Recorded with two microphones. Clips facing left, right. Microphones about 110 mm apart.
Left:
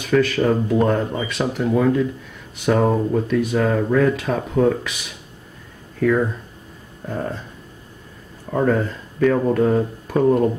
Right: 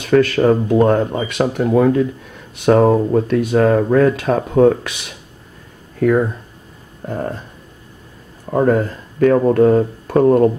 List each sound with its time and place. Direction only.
0.0 s speech: 45° right (ahead or behind)
3.3 s speech: 50° right (ahead or behind)
6.0 s speech: 50° right (ahead or behind)
7.1 s speech: 30° right (ahead or behind)
8.5 s speech: 30° right (ahead or behind); by 10.5 s 45° right (ahead or behind)